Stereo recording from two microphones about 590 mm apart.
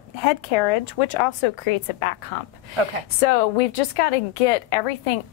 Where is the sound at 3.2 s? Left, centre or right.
Left.